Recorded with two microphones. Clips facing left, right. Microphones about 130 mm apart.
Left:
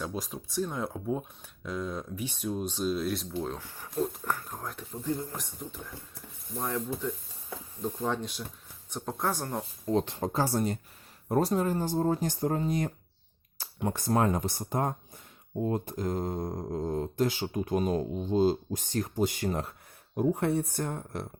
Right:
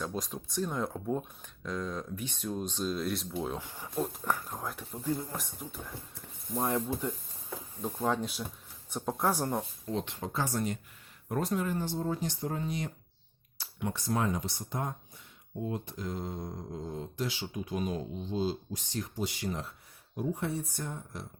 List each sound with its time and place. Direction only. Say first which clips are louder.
0.0 s speech: left 1 dB; centre (ahead or behind)
3.5 s speech: even; 15° right (ahead or behind)
4.0 s speech: left 2 dB; centre (ahead or behind)
6.6 s speech: right 1 dB; 15° right (ahead or behind)
9.8 s speech: left 7 dB; 40° left (ahead or behind); by 21.2 s 60° left (ahead or behind)